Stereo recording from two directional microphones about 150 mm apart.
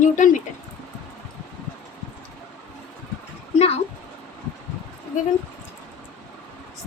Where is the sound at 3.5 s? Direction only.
40° left (ahead or behind).